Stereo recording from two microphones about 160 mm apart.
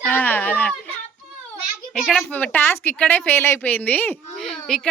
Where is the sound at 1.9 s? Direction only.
Centre (ahead or behind).